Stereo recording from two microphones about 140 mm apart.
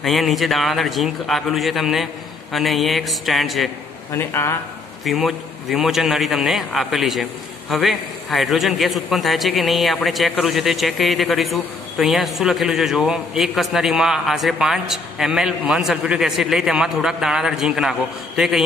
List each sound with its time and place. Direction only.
0.0 s a man's voice: centre (ahead or behind)
4.1 s speech: 15° left (ahead or behind)
5.0 s a man's voice: centre (ahead or behind)